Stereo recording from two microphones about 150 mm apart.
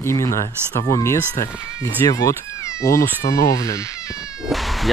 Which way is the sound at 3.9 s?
5° right (ahead or behind).